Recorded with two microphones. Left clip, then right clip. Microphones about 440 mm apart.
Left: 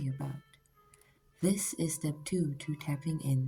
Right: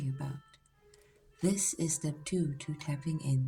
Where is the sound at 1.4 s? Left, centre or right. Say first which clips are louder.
Even; left.